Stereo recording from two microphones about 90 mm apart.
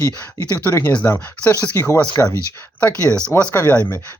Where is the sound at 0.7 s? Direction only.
20° left (ahead or behind).